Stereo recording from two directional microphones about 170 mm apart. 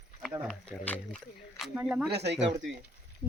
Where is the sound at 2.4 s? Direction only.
90° right.